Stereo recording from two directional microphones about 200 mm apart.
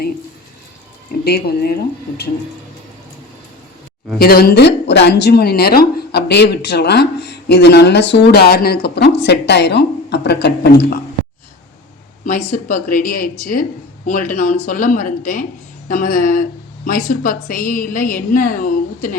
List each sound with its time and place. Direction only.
1.2 s a woman's voice: 50° left (ahead or behind)
4.2 s speech: 50° left (ahead or behind)
12.2 s a woman's voice: 40° left (ahead or behind)